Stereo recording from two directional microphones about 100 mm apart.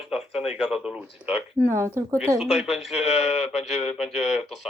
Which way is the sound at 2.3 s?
5° right (ahead or behind).